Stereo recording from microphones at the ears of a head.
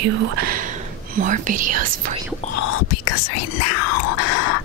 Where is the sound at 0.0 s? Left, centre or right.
Right.